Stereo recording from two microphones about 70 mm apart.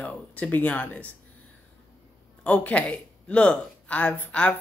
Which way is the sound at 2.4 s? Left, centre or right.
Centre.